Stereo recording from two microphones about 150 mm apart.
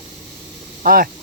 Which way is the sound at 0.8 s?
70° right (ahead or behind).